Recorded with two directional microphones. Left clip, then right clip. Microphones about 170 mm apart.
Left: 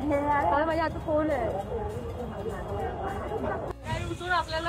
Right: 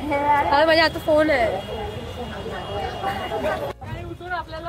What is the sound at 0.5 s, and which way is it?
Speech, 90° right.